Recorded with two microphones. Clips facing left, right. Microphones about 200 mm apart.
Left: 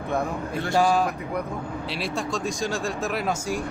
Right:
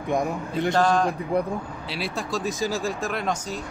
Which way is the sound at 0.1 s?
15° right (ahead or behind).